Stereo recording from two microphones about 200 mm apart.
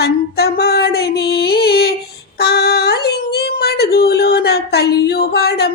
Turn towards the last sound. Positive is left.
turn(degrees=55)  # may be behind; listen again after turning